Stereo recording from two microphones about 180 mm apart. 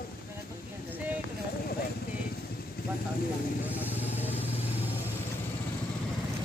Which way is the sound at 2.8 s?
55° left (ahead or behind).